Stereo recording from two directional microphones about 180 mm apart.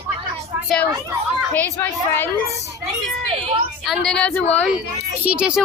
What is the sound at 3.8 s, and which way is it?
Speech, centre (ahead or behind).